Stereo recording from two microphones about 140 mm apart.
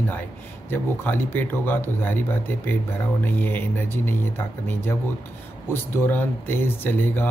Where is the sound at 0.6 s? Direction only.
15° left (ahead or behind).